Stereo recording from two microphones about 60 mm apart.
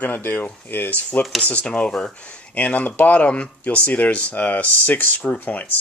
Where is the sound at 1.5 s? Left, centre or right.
Centre.